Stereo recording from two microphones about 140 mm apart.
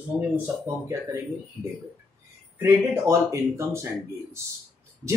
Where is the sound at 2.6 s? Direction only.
20° right (ahead or behind).